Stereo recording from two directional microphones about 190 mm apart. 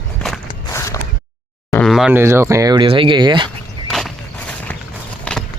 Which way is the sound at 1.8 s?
Centre (ahead or behind).